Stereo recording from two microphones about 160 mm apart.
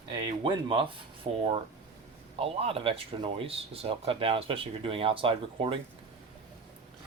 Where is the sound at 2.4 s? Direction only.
35° right (ahead or behind).